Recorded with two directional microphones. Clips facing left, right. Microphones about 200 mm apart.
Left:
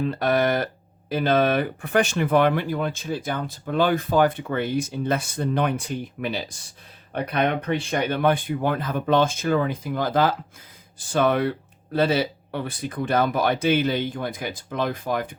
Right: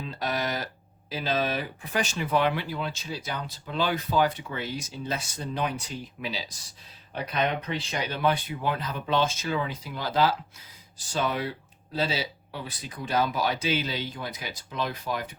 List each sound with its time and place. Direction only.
0.0 s speech: 55° left (ahead or behind)